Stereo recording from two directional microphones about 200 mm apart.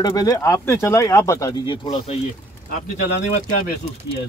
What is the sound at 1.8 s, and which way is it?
Speech, 30° left (ahead or behind).